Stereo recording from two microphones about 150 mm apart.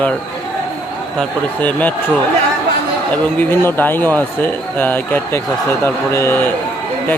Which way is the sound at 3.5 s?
15° left (ahead or behind).